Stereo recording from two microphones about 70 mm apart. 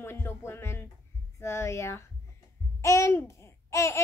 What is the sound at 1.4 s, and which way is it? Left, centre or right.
A child's voice, left.